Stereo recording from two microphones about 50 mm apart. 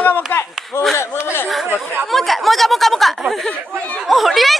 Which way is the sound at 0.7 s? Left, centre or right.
Left.